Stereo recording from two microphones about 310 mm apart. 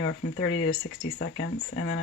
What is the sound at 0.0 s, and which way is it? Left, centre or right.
Speech, left.